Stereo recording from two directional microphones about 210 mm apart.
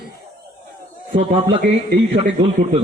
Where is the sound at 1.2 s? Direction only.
25° right (ahead or behind).